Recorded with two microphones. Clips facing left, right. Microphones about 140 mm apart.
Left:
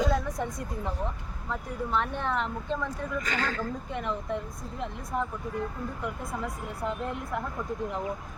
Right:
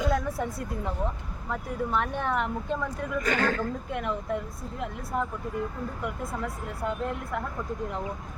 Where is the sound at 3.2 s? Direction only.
50° right (ahead or behind).